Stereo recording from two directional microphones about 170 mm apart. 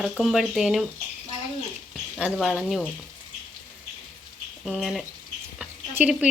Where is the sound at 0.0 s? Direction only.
Centre (ahead or behind).